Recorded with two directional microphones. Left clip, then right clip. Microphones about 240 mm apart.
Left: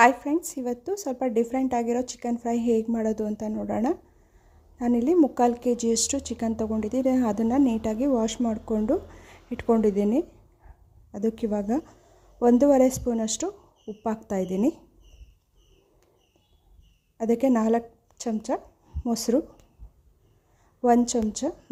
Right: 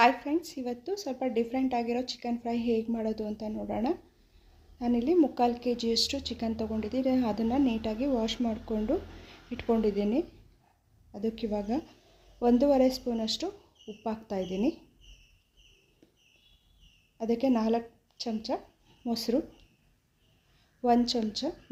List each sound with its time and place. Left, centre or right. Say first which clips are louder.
0.0 s a woman's voice: left 5 dB; left
11.3 s a woman's voice: left 5 dB; left
17.2 s a woman's voice: left 5 dB; left
21.1 s a woman's voice: left 4 dB; left